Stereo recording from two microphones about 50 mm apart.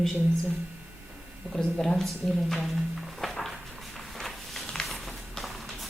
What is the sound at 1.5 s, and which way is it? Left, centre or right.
Speech, centre.